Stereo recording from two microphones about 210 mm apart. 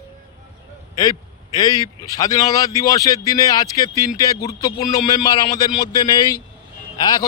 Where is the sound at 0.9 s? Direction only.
15° left (ahead or behind).